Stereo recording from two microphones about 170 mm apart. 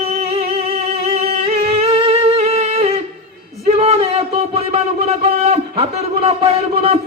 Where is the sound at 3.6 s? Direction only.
35° right (ahead or behind).